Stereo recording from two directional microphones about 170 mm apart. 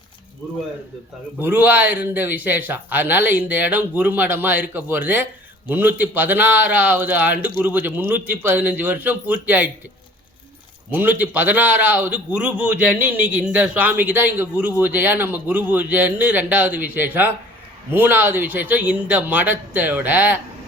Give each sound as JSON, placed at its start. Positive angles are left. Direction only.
{"t": 1.4, "sound": "a man's voice", "side_deg": -10}
{"t": 10.9, "sound": "a man's voice", "side_deg": -10}